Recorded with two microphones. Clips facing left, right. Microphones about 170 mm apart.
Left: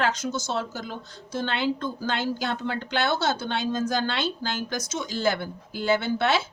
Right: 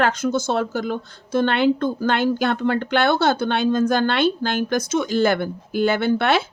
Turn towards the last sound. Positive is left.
turn(degrees=-60)  # may be behind; listen again after turning